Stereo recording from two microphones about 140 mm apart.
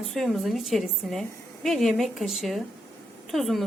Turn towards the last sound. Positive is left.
turn(degrees=0)  # may be behind; listen again after turning